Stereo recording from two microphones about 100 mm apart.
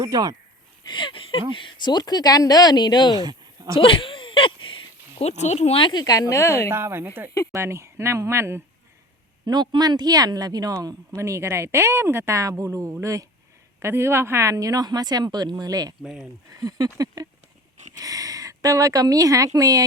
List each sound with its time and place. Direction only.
0.0 s speech: 40° right (ahead or behind)
0.9 s speech: 55° left (ahead or behind)
3.2 s a sound: 45° right (ahead or behind)
3.8 s a sound: 60° left (ahead or behind)
5.2 s speech: 90° left
5.8 s a woman's voice: 45° left (ahead or behind); by 6.7 s 30° left (ahead or behind)
6.7 s speech: 25° right (ahead or behind)
9.5 s speech: 45° right (ahead or behind)